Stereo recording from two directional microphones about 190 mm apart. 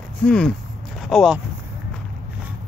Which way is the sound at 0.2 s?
5° left (ahead or behind).